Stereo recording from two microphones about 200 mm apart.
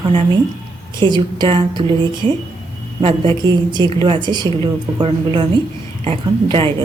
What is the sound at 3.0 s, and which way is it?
A woman's voice, 25° right (ahead or behind).